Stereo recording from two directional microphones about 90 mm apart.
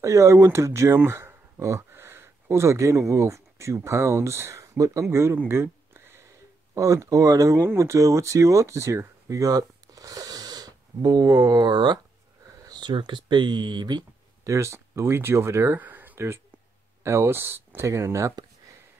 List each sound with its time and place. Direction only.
0.0 s speech: 35° right (ahead or behind)
6.7 s speech: 35° right (ahead or behind); by 12.0 s 55° right (ahead or behind)
12.4 s a sound: 50° right (ahead or behind)
12.9 s speech: 60° right (ahead or behind)
14.4 s speech: 35° right (ahead or behind)
15.8 s a sound: 20° right (ahead or behind)
17.0 s speech: 30° right (ahead or behind)